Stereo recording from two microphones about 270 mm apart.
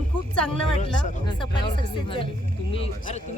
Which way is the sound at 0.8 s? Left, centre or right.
Centre.